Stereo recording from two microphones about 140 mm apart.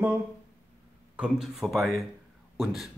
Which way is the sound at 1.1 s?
5° right (ahead or behind).